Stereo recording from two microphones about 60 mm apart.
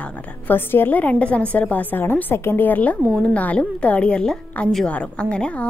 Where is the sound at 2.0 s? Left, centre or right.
Left; by 5.6 s centre.